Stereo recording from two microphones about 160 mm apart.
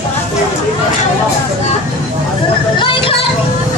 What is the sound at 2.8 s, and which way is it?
Music, 30° left (ahead or behind).